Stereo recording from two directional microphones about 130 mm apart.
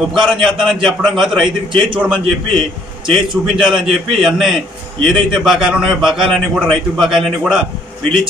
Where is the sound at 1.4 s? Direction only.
40° right (ahead or behind).